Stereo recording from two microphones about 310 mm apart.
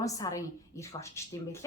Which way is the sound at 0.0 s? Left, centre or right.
Centre.